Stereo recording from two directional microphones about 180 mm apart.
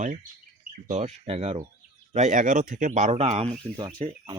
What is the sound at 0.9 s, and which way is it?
Speech, 40° right (ahead or behind).